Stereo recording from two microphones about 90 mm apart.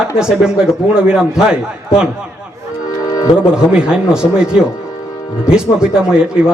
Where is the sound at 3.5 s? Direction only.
10° right (ahead or behind).